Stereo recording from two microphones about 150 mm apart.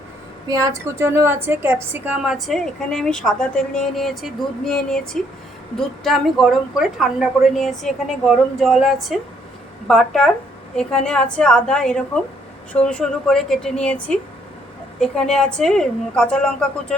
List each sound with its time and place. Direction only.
0.4 s a woman's voice: 25° right (ahead or behind)
2.2 s a woman's voice: centre (ahead or behind)